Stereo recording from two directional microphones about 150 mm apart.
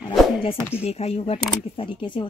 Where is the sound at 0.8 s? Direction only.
45° left (ahead or behind).